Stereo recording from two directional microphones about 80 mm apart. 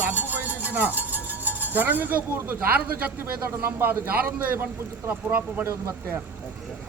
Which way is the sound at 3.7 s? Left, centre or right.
Right.